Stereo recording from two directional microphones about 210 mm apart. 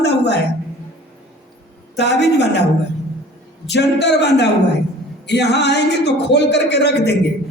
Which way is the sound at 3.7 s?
55° left (ahead or behind).